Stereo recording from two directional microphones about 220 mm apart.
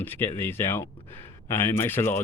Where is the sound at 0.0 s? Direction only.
10° left (ahead or behind).